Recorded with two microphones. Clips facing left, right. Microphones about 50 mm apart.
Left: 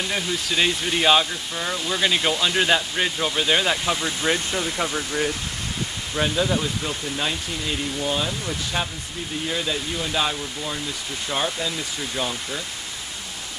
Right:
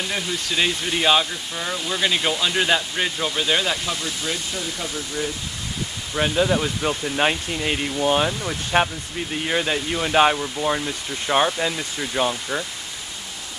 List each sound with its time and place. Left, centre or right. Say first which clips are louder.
0.1 s speech: even; centre; by 4.1 s left
4.2 s speech: left 4 dB; left
6.1 s speech: right 2 dB; centre
6.8 s speech: right 5 dB; right